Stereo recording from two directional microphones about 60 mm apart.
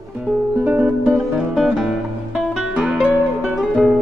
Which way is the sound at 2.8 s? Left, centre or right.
Centre.